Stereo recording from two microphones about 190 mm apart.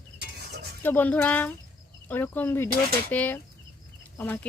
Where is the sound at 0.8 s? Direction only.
10° left (ahead or behind).